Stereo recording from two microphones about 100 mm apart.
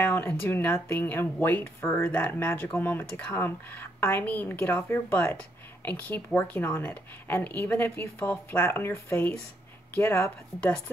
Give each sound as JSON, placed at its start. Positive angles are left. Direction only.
{"t": 0.0, "sound": "speech", "side_deg": 20}